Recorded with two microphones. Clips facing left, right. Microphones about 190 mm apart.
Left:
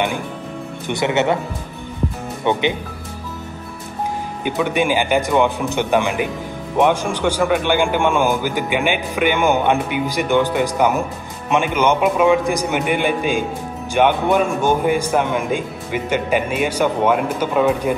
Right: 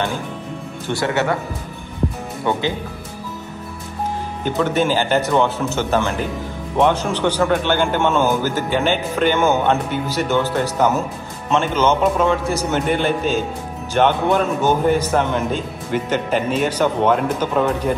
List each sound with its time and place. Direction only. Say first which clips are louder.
0.8 s speech: left 2 dB; 20° left (ahead or behind)
2.5 s speech: left 2 dB; 20° left (ahead or behind)
4.5 s a man's voice: even; 15° left (ahead or behind)